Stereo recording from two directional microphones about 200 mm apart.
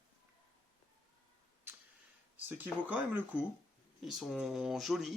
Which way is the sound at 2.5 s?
10° right (ahead or behind).